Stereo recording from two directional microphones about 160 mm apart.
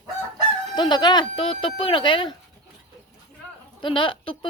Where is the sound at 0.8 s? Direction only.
25° left (ahead or behind).